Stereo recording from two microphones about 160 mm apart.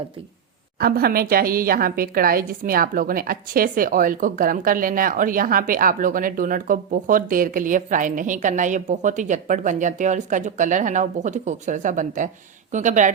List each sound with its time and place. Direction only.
0.8 s a woman's voice: 70° right (ahead or behind); by 13.1 s 50° right (ahead or behind)